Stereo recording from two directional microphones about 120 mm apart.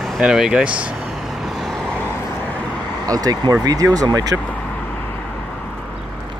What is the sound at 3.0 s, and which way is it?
Speech, 30° right (ahead or behind).